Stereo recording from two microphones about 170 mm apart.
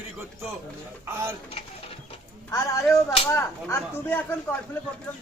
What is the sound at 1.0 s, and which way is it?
Speech, 15° right (ahead or behind).